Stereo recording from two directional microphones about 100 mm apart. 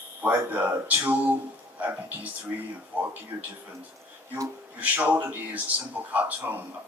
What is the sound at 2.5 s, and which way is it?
Speech, 25° right (ahead or behind).